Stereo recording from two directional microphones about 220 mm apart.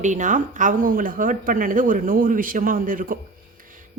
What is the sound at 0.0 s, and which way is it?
Speech, 35° right (ahead or behind).